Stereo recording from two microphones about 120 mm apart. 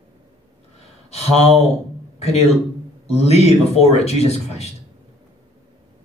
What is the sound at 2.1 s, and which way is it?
A man's voice, 60° left (ahead or behind).